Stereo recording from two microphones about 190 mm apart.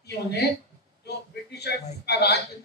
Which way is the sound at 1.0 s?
60° left (ahead or behind).